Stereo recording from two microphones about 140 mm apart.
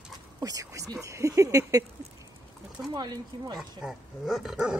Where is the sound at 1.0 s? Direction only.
20° right (ahead or behind).